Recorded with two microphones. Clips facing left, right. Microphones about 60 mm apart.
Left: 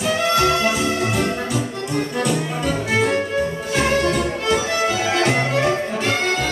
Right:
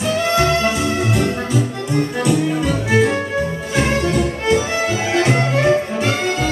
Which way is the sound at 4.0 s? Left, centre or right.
Right.